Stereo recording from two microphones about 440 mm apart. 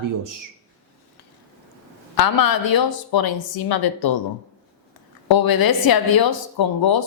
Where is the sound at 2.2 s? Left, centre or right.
Left.